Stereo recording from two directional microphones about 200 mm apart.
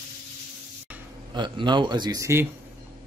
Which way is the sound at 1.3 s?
25° right (ahead or behind).